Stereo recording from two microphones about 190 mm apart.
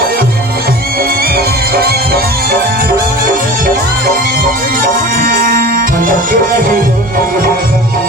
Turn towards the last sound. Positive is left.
turn(degrees=-45)  # may be behind; listen again after turning